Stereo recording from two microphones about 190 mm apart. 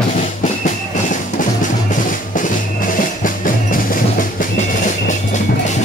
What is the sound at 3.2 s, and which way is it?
Music, 45° left (ahead or behind).